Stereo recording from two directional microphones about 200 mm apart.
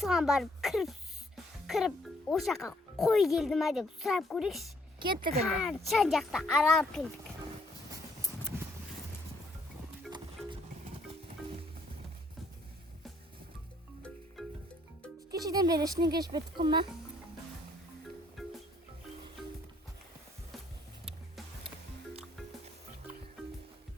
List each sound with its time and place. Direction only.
0.0 s a child's voice: centre (ahead or behind)
4.9 s speech: 25° right (ahead or behind)
5.6 s speech: centre (ahead or behind)
15.3 s speech: 20° right (ahead or behind)
18.4 s music: centre (ahead or behind)
21.0 s music: centre (ahead or behind)